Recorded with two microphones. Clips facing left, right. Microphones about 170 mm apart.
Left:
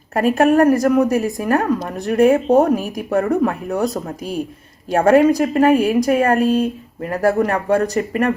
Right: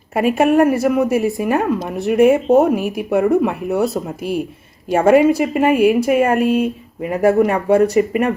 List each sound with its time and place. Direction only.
0.1 s a woman's voice: 10° right (ahead or behind)